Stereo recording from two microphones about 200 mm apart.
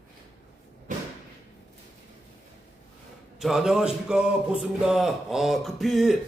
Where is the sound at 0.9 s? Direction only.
40° right (ahead or behind).